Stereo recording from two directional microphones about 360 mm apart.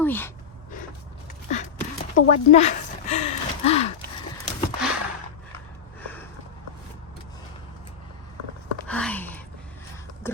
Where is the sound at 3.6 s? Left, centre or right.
Centre.